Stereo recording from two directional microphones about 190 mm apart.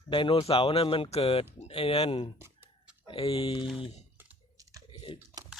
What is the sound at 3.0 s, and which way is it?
Speech, 30° left (ahead or behind).